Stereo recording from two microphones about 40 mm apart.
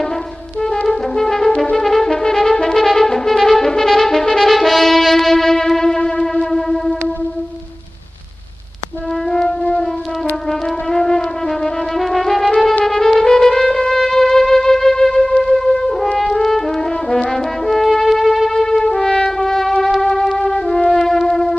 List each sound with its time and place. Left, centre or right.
0.8 s music: centre
1.9 s brass instrument: centre
5.9 s music: centre
6.5 s music: centre
9.3 s music: centre
10.9 s music: centre
18.5 s music: centre